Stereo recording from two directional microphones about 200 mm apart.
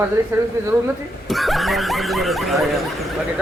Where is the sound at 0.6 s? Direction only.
15° right (ahead or behind).